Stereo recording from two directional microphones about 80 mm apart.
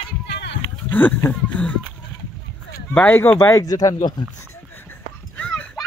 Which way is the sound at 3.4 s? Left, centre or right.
Left.